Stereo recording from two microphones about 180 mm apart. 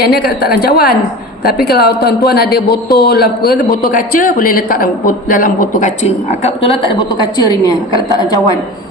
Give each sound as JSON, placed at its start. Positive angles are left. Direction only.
{"t": 0.0, "sound": "a man's voice", "side_deg": 60}
{"t": 7.2, "sound": "a woman's voice", "side_deg": 20}